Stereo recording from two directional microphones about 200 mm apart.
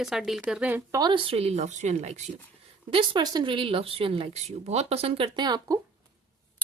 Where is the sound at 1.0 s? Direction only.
25° right (ahead or behind).